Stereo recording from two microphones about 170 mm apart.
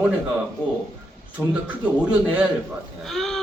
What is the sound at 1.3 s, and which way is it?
A man's voice, 10° right (ahead or behind).